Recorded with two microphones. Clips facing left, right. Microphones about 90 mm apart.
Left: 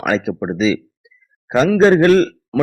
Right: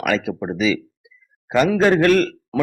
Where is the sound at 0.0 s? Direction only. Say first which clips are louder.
Left 3 dB; 25° left (ahead or behind).